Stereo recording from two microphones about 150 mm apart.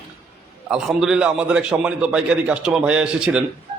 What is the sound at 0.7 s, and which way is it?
A man's voice, 5° right (ahead or behind).